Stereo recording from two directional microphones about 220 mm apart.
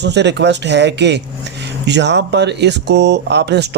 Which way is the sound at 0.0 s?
50° right (ahead or behind).